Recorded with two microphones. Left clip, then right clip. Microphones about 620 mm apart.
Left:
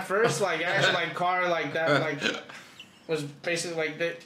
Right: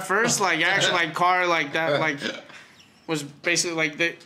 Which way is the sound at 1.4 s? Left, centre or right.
Right.